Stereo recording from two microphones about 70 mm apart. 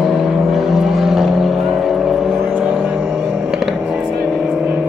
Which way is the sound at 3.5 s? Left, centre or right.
Centre.